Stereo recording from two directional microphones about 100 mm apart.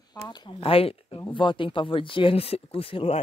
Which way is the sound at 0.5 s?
70° left (ahead or behind).